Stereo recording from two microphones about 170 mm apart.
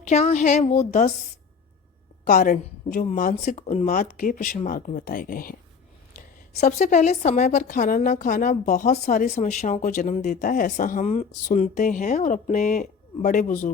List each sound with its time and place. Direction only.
0.0 s a woman's voice: 40° left (ahead or behind)
2.2 s a woman's voice: 50° left (ahead or behind)